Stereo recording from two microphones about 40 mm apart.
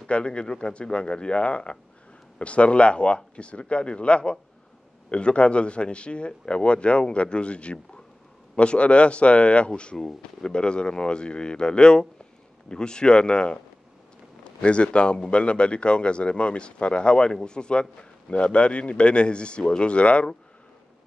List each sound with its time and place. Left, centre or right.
0.0 s a man's voice: left